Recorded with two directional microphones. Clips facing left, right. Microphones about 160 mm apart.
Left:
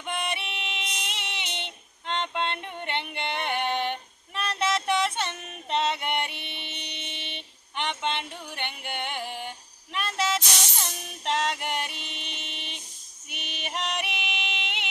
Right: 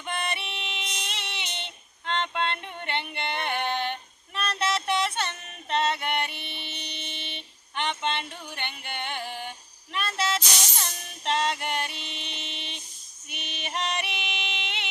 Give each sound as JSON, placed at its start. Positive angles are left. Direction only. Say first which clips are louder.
{"t": 0.0, "sound": "female singing", "louder": "even", "side_deg": 15}
{"t": 4.4, "sound": "music", "louder": "left 1 dB", "side_deg": 15}